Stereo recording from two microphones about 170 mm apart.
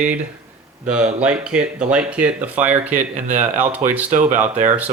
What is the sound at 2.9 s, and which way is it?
Speech, 45° right (ahead or behind).